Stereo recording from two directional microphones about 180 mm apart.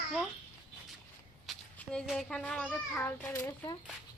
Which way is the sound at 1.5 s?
Centre (ahead or behind).